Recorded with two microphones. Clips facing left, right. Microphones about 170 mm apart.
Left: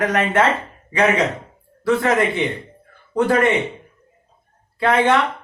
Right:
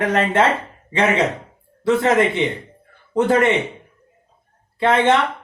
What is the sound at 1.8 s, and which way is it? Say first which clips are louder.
A man's voice: right 2 dB; 25° right (ahead or behind).